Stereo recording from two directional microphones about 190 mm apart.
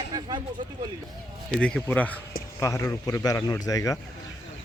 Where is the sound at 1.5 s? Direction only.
5° left (ahead or behind).